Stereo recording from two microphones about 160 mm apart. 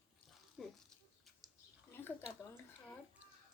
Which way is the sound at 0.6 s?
5° right (ahead or behind).